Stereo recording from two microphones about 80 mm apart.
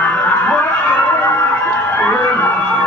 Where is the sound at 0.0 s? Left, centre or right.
Centre.